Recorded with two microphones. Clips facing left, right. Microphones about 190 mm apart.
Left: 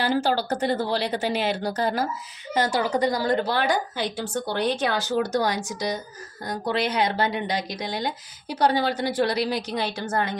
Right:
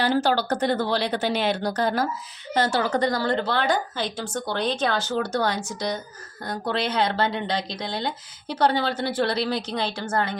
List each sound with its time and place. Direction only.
0.0 s speech: 10° left (ahead or behind)